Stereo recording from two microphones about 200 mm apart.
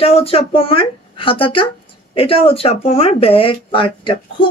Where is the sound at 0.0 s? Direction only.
30° left (ahead or behind).